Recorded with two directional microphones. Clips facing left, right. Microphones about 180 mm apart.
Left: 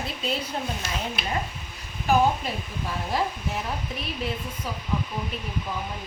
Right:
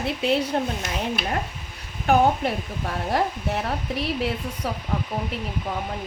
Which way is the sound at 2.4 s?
65° right (ahead or behind).